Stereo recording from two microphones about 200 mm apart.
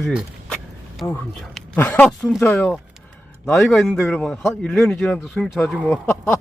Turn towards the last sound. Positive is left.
turn(degrees=10)  # may be behind; listen again after turning